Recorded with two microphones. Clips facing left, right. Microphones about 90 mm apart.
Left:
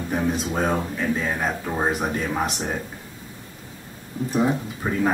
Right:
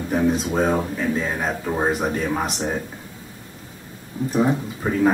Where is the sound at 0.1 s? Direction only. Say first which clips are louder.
Right 4 dB; centre (ahead or behind).